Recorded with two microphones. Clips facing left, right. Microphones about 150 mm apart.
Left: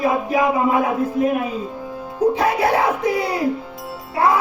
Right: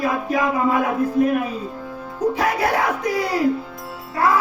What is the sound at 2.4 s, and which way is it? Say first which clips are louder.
Music: left 3 dB; 25° left (ahead or behind).